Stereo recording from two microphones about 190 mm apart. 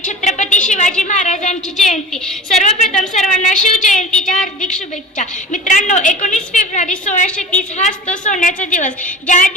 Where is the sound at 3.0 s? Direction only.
40° left (ahead or behind).